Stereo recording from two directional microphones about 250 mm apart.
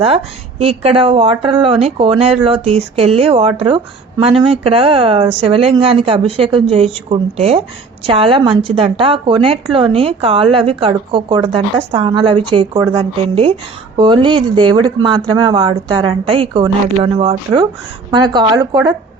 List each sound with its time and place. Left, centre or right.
0.6 s a woman's voice: right